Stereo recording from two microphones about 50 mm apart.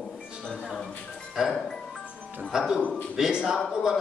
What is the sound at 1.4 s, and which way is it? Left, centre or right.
Speech, centre.